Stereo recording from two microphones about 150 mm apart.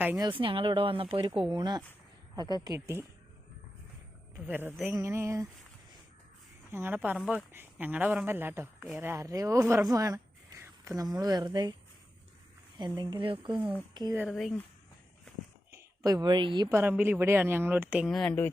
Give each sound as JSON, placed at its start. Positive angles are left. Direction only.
{"t": 0.2, "sound": "a woman's voice", "side_deg": -35}
{"t": 4.4, "sound": "speech", "side_deg": -15}
{"t": 6.7, "sound": "a woman's voice", "side_deg": -15}
{"t": 13.0, "sound": "speech", "side_deg": -30}
{"t": 14.2, "sound": "speech", "side_deg": 0}
{"t": 15.7, "sound": "speech", "side_deg": -25}
{"t": 16.6, "sound": "speech", "side_deg": -15}
{"t": 18.1, "sound": "speech", "side_deg": 5}